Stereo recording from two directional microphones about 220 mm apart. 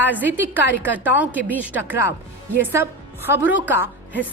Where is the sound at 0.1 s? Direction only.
5° right (ahead or behind).